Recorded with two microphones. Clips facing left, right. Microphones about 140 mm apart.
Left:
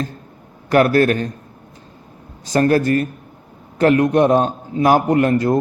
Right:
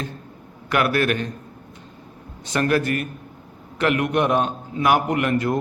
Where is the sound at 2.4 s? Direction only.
35° left (ahead or behind).